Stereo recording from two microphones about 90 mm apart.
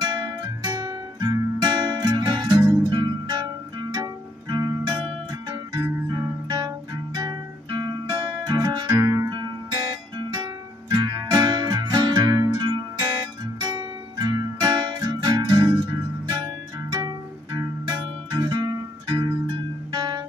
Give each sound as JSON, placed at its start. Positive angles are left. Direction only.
{"t": 0.0, "sound": "music", "side_deg": -45}
{"t": 5.5, "sound": "music", "side_deg": -30}
{"t": 7.2, "sound": "music", "side_deg": -45}
{"t": 8.9, "sound": "music", "side_deg": -35}
{"t": 10.1, "sound": "music", "side_deg": -55}